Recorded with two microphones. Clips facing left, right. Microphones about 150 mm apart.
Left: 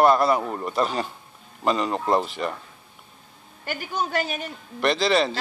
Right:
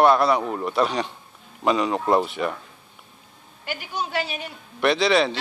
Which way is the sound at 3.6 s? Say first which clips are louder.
Left 2 dB; 45° left (ahead or behind).